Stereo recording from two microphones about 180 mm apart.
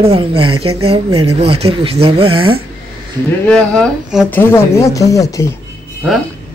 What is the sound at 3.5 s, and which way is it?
A woman's voice, 5° left (ahead or behind).